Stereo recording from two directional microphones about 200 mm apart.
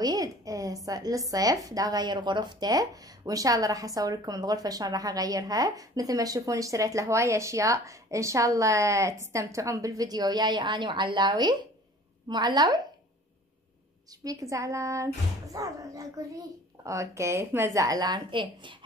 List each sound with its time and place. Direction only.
0.0 s a sound: 15° right (ahead or behind)
0.8 s a woman's voice: 20° right (ahead or behind)
14.2 s speech: 15° right (ahead or behind)